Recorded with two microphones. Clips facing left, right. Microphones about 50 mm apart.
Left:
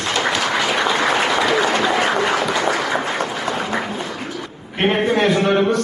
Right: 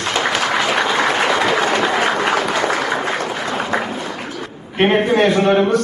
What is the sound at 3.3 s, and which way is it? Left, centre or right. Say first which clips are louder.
Applause: even; centre.